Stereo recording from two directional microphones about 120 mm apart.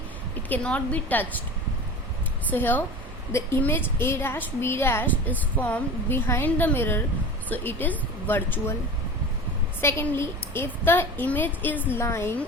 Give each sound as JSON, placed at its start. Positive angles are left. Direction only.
{"t": 0.4, "sound": "speech", "side_deg": 10}
{"t": 2.5, "sound": "a woman's voice", "side_deg": 15}
{"t": 9.8, "sound": "a woman's voice", "side_deg": 20}